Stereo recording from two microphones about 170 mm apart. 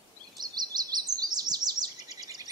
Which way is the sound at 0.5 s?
25° right (ahead or behind).